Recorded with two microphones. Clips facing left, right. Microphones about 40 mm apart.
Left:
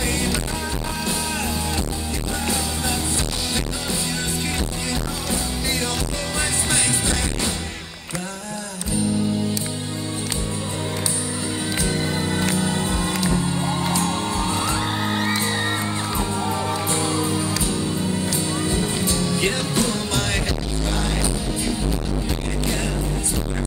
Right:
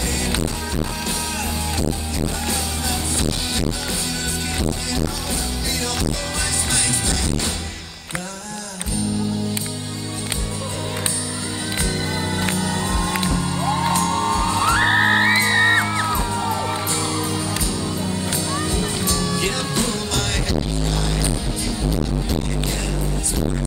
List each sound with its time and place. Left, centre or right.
2.4 s music: left
11.9 s music: left
13.7 s music: right
16.9 s music: left